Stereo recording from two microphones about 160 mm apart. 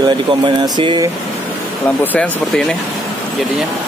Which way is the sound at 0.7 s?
30° right (ahead or behind).